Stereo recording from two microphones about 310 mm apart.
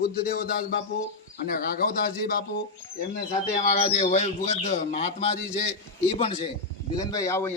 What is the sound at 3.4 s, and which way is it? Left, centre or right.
A man's voice, left.